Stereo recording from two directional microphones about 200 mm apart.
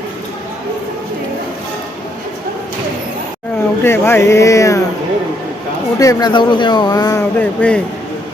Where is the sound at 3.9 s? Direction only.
10° left (ahead or behind).